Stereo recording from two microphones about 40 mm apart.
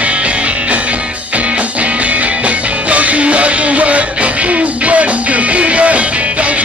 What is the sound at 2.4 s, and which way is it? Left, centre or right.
Music, right.